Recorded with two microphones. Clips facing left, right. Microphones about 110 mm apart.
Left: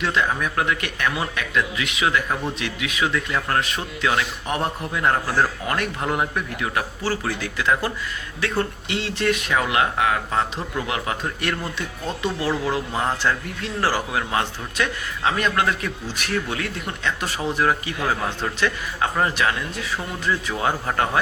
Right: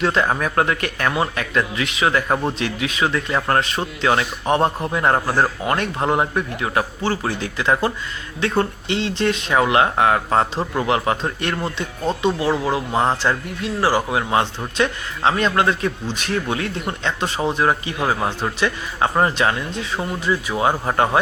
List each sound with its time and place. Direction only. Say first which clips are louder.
0.0 s speech: right 4 dB; 35° right (ahead or behind); by 12.8 s 15° right (ahead or behind)
12.9 s speech: right 6 dB; 30° right (ahead or behind)
13.6 s speech: right 4 dB; 15° right (ahead or behind)
18.9 s speech: right 5 dB; 30° right (ahead or behind)